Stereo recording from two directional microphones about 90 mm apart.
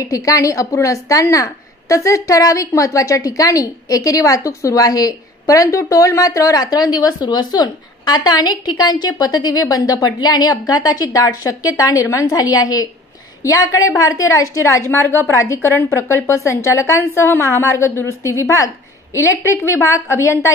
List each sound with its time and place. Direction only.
0.0 s speech: 40° left (ahead or behind)